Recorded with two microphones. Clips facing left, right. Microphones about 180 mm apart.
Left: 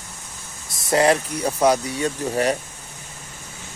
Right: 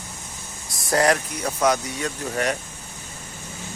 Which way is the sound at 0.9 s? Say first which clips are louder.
Left 2 dB; 25° left (ahead or behind).